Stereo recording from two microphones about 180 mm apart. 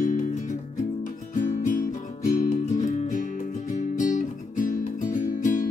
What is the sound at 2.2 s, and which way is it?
Music, 45° left (ahead or behind).